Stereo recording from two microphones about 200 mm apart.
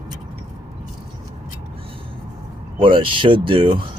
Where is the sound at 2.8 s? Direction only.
25° right (ahead or behind).